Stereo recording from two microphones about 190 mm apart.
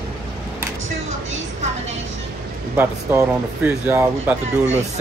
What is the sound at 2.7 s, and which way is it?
Speech, 10° right (ahead or behind).